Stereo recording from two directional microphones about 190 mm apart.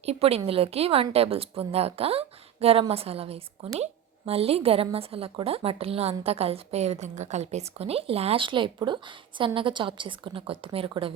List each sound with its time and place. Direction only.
0.0 s a woman's voice: 35° right (ahead or behind)